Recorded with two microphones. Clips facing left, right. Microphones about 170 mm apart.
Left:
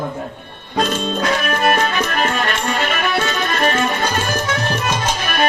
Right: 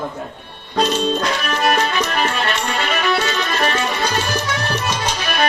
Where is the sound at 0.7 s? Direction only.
50° left (ahead or behind).